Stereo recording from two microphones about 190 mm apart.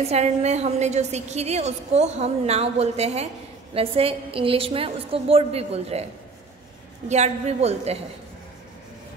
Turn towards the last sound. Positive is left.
turn(degrees=-35)  # may be behind; listen again after turning